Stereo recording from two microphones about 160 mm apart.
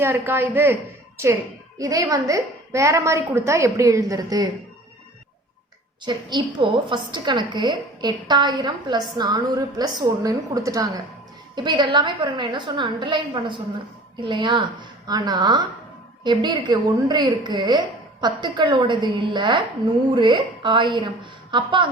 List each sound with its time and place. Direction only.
0.0 s a woman's voice: 15° right (ahead or behind)
6.1 s a woman's voice: 30° right (ahead or behind)